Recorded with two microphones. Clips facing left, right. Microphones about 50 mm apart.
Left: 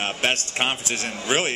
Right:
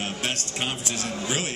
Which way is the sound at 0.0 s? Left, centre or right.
Left.